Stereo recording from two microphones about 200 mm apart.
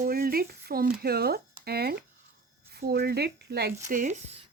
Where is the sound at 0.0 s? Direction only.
50° right (ahead or behind).